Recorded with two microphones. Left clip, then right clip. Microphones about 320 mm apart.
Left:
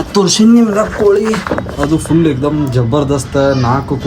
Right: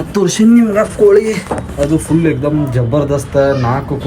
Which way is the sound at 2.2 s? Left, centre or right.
Centre.